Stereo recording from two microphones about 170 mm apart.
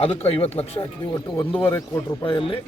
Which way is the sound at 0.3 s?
35° left (ahead or behind).